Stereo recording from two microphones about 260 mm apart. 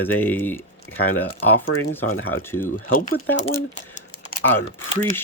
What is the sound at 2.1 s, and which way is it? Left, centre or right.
Speech, left.